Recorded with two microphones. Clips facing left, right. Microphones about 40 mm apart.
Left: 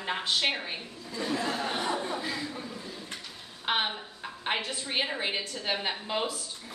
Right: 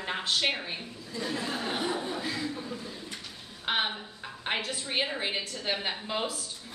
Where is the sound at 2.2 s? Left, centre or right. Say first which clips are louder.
Even; centre.